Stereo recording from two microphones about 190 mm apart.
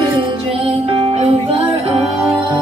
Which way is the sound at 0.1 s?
30° right (ahead or behind).